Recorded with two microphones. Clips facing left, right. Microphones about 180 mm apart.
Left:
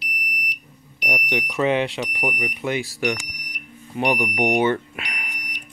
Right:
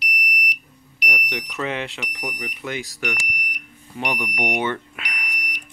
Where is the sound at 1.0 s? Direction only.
25° left (ahead or behind).